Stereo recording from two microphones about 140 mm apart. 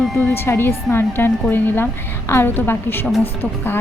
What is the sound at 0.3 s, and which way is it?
A woman's voice, 15° left (ahead or behind).